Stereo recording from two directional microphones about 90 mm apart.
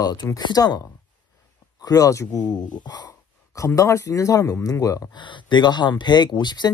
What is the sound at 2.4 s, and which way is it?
Speech, 50° left (ahead or behind).